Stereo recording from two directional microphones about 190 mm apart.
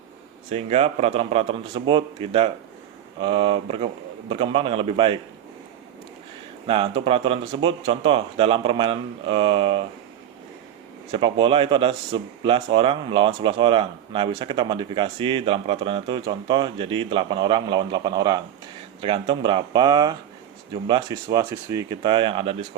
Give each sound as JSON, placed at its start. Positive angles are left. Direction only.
{"t": 0.5, "sound": "a man's voice", "side_deg": -35}
{"t": 6.7, "sound": "speech", "side_deg": -30}
{"t": 11.1, "sound": "speech", "side_deg": -25}